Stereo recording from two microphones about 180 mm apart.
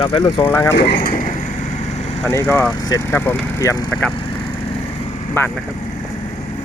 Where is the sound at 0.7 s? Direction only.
70° left (ahead or behind).